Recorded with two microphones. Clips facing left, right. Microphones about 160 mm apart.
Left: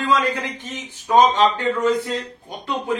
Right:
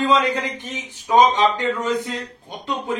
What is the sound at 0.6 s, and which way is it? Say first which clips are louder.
Speech: right 1 dB; 15° right (ahead or behind).